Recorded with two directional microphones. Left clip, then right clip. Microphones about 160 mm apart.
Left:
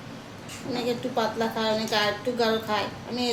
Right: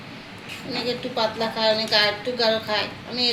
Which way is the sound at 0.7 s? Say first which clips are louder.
Right 1 dB; 10° left (ahead or behind).